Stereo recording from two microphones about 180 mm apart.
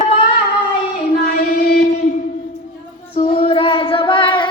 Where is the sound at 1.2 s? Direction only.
55° left (ahead or behind).